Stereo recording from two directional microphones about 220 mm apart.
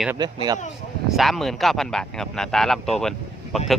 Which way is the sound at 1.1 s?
Centre (ahead or behind).